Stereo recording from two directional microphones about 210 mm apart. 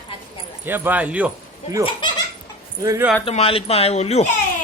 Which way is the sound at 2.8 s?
15° right (ahead or behind).